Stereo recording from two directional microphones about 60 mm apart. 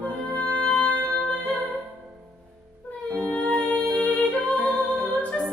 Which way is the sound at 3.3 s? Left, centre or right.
Left.